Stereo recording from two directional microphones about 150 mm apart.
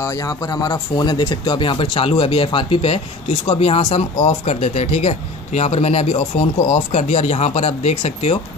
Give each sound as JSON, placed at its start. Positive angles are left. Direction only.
{"t": 0.0, "sound": "speech", "side_deg": 25}